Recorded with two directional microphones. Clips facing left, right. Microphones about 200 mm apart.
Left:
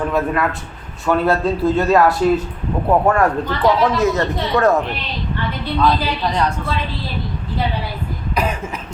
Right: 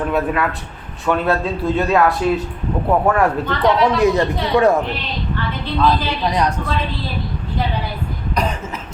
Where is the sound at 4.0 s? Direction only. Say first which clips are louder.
Right 2 dB; 15° right (ahead or behind).